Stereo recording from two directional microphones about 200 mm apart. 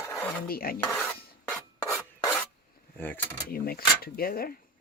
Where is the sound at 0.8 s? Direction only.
5° left (ahead or behind).